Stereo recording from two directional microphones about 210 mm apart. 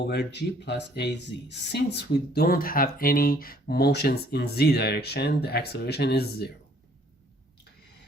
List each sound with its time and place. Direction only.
0.1 s speech: 55° left (ahead or behind)